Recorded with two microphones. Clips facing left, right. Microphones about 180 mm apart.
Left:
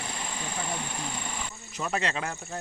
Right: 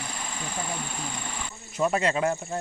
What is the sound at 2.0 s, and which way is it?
Speech, 45° right (ahead or behind).